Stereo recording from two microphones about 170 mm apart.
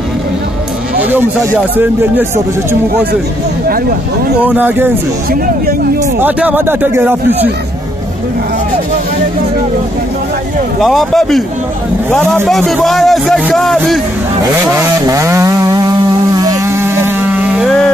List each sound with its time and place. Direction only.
0.9 s speech: 10° right (ahead or behind)
4.5 s speech: 10° right (ahead or behind)
6.2 s speech: 10° right (ahead or behind)
10.8 s a man's voice: centre (ahead or behind)
14.4 s vehicle: 20° right (ahead or behind)
17.6 s a man's voice: 5° left (ahead or behind)